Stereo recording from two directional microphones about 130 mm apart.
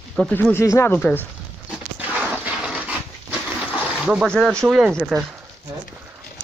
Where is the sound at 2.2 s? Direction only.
5° right (ahead or behind).